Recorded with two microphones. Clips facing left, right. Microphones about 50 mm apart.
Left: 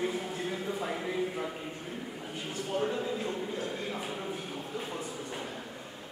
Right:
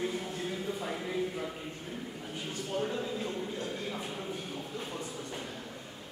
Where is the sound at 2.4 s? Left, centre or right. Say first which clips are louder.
Left 2 dB; centre.